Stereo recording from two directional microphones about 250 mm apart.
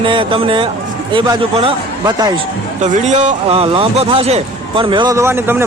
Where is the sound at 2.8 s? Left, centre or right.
Right.